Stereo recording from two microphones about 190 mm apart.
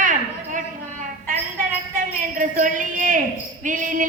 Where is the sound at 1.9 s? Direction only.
45° right (ahead or behind).